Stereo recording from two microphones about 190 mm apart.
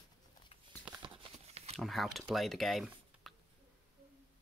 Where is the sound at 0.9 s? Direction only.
25° right (ahead or behind).